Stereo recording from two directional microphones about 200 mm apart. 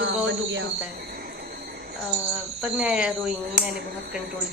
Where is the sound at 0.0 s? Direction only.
70° right (ahead or behind).